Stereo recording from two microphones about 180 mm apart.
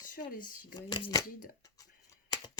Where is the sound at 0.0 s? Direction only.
50° left (ahead or behind).